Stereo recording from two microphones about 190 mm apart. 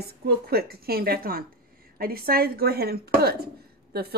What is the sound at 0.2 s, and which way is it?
Speech, 55° right (ahead or behind).